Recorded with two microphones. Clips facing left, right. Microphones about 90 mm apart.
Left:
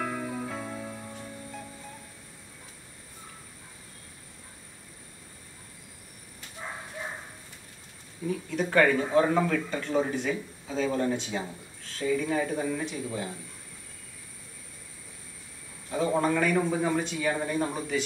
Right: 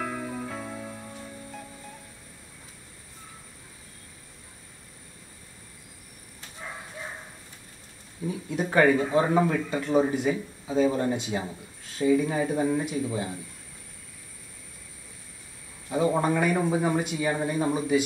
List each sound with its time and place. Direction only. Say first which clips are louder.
0.0 s music: even; centre (ahead or behind)
8.3 s speech: even; 15° right (ahead or behind)
15.9 s speech: right 2 dB; 15° right (ahead or behind)